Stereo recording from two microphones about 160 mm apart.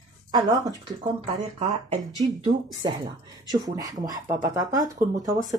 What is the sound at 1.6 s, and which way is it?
Speech, 45° right (ahead or behind).